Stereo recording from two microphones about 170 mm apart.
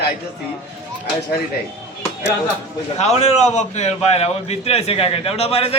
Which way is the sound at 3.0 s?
40° left (ahead or behind).